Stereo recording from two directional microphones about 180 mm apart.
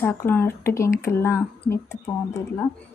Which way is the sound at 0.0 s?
15° left (ahead or behind).